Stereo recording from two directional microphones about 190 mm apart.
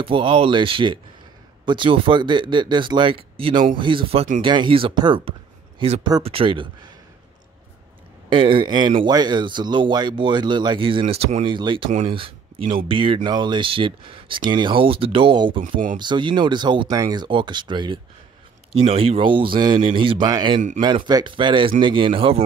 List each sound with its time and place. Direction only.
0.0 s speech: 30° right (ahead or behind)
8.3 s speech: 25° right (ahead or behind)